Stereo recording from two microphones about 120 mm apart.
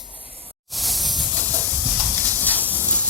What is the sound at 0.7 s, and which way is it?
Hiss, centre (ahead or behind).